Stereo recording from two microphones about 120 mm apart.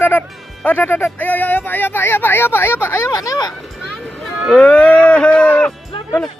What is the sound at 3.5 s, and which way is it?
Speech, centre (ahead or behind).